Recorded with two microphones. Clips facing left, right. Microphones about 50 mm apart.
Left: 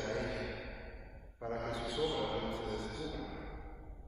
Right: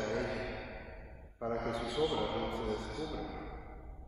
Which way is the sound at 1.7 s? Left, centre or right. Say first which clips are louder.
Right 2 dB; right.